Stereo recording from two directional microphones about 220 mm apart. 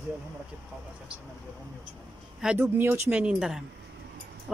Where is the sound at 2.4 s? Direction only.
5° right (ahead or behind).